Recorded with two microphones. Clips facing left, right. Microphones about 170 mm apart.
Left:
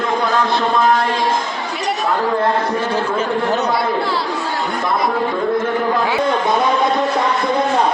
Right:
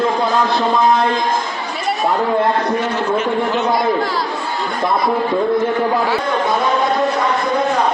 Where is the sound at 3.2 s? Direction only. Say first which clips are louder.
Even; 40° left (ahead or behind).